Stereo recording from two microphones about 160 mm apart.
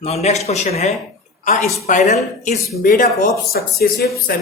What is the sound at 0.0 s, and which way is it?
Speech, 40° left (ahead or behind).